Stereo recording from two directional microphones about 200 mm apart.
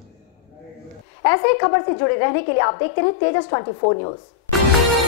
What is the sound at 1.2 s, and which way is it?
A woman's voice, 20° left (ahead or behind).